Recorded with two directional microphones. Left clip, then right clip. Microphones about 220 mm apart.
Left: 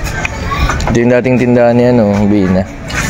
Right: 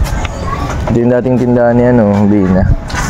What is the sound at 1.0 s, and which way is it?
Speech, centre (ahead or behind).